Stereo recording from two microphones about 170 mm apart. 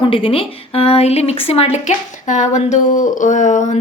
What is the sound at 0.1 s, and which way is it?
A woman's voice, 35° left (ahead or behind).